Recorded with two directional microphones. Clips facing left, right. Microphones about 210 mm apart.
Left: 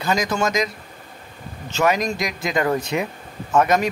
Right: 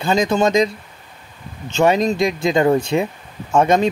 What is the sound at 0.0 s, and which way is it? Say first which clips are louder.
Speech: right 5 dB; 25° right (ahead or behind).